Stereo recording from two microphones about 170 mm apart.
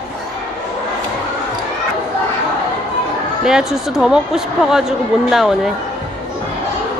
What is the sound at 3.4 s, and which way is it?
Speech, 5° right (ahead or behind).